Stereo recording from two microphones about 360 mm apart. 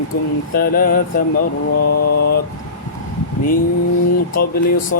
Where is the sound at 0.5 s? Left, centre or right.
Left.